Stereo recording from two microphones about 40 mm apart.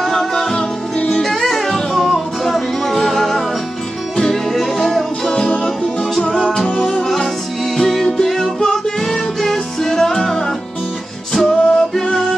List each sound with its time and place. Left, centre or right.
0.0 s music: centre
0.6 s music: left; by 3.4 s centre
4.5 s music: centre
6.3 s music: centre